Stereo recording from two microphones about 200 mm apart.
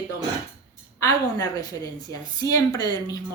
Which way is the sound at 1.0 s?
20° left (ahead or behind).